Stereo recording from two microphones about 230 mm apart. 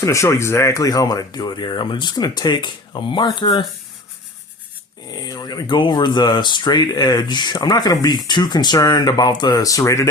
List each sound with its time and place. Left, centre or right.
0.0 s speech: centre
5.1 s speech: centre